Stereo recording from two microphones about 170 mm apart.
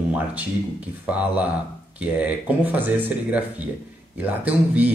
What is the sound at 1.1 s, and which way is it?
Speech, 10° right (ahead or behind).